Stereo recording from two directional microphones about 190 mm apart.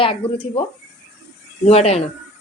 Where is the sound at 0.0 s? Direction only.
30° left (ahead or behind).